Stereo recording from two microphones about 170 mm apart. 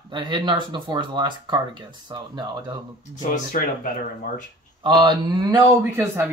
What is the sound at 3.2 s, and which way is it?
Speech, 50° left (ahead or behind).